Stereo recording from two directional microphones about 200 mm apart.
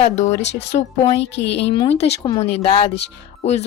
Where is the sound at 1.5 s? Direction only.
25° left (ahead or behind).